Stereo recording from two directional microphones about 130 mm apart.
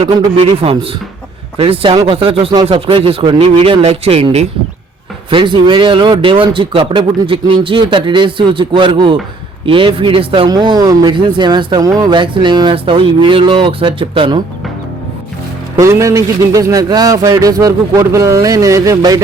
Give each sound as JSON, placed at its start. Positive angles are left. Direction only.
{"t": 0.0, "sound": "speech", "side_deg": -45}
{"t": 5.3, "sound": "speech", "side_deg": -40}
{"t": 15.8, "sound": "speech", "side_deg": -25}